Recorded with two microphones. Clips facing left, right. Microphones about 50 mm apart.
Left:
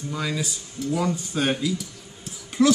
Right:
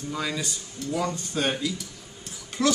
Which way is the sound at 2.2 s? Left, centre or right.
Centre.